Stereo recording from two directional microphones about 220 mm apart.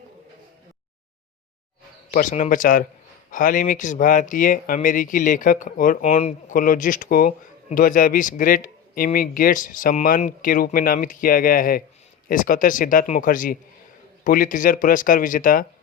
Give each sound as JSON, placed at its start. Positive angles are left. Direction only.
{"t": 2.1, "sound": "speech", "side_deg": 35}